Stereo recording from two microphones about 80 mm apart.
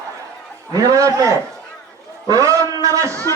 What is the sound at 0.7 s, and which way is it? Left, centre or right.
A man's voice, right.